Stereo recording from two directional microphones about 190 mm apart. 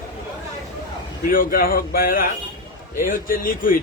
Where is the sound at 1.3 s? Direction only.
50° left (ahead or behind).